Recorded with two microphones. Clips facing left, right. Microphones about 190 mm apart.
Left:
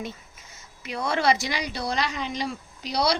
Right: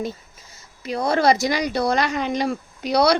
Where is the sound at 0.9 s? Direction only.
35° right (ahead or behind).